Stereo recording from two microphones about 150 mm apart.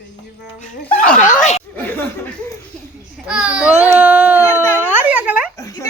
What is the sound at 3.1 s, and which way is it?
Speech, 5° right (ahead or behind).